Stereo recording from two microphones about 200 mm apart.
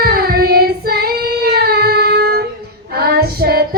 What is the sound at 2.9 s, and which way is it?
Female singing, 50° right (ahead or behind).